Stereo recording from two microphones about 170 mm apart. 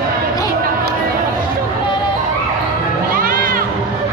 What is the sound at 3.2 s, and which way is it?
Music, 55° right (ahead or behind).